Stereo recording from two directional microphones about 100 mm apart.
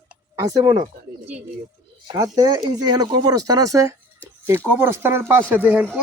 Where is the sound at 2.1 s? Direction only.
35° right (ahead or behind).